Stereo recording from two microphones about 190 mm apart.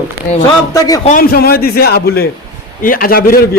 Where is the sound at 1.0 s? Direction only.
50° left (ahead or behind).